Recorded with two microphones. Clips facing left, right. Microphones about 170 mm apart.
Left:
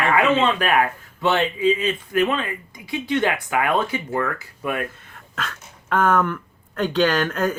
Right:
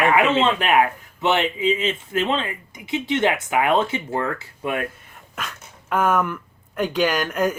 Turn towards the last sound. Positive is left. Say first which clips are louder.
# left 1 dB
turn(degrees=-10)  # may be behind; listen again after turning